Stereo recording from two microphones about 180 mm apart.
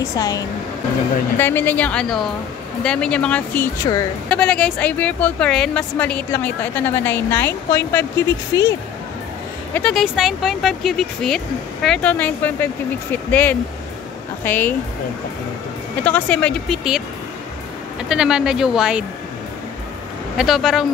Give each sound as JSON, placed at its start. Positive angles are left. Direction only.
{"t": 0.0, "sound": "speech", "side_deg": 20}
{"t": 4.3, "sound": "speech", "side_deg": 5}
{"t": 9.8, "sound": "speech", "side_deg": 5}
{"t": 16.0, "sound": "speech", "side_deg": 10}
{"t": 18.0, "sound": "speech", "side_deg": -5}
{"t": 20.3, "sound": "speech", "side_deg": 0}